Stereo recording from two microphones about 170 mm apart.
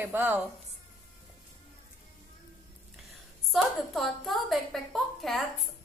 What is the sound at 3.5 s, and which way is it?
A woman's voice, centre (ahead or behind).